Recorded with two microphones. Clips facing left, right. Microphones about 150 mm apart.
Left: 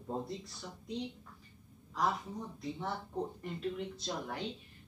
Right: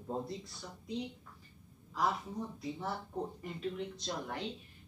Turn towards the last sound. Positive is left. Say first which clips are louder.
# even
turn(degrees=0)  # may be behind; listen again after turning